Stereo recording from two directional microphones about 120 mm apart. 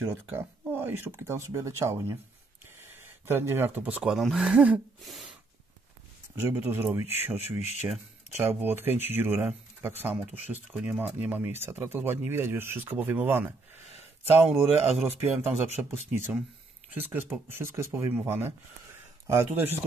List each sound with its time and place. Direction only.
0.1 s speech: 15° right (ahead or behind); by 5.3 s centre (ahead or behind)
6.3 s speech: 15° right (ahead or behind)
7.5 s speech: 65° left (ahead or behind)
8.4 s speech: 15° right (ahead or behind)
14.5 s a man's voice: centre (ahead or behind)
15.8 s speech: 20° right (ahead or behind)